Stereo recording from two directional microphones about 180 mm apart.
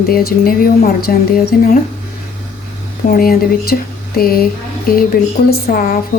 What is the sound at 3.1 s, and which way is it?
Speech, 55° left (ahead or behind).